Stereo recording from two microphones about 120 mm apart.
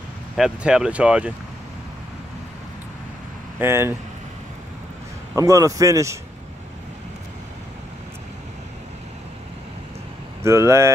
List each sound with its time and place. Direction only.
0.4 s speech: 5° right (ahead or behind)
3.5 s speech: 20° right (ahead or behind)
5.3 s speech: 25° right (ahead or behind)
10.4 s speech: 25° right (ahead or behind)